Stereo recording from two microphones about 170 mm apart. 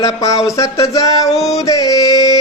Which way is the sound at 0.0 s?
20° left (ahead or behind).